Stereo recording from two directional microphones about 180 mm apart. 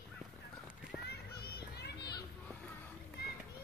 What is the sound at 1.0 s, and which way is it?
Children playing, 60° left (ahead or behind).